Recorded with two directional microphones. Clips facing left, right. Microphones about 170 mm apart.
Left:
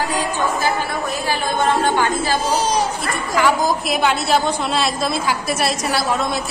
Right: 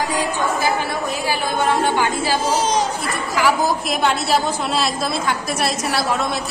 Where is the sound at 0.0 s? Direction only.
15° right (ahead or behind).